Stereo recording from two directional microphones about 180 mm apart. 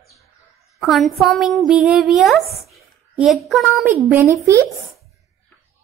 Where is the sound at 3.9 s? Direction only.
15° right (ahead or behind).